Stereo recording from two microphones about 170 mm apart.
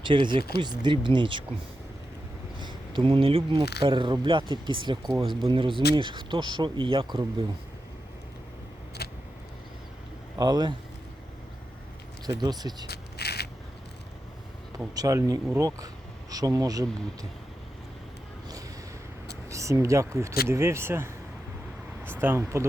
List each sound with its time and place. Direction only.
0.0 s speech: 30° right (ahead or behind)
2.6 s speech: 25° right (ahead or behind)
9.0 s vehicle: 70° left (ahead or behind)
10.3 s speech: 25° right (ahead or behind)
12.4 s speech: 25° right (ahead or behind)
12.9 s a sound: 70° left (ahead or behind)
14.9 s speech: 20° right (ahead or behind)
19.5 s speech: 15° right (ahead or behind)